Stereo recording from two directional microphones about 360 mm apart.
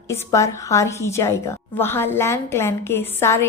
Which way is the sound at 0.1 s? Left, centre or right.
Centre.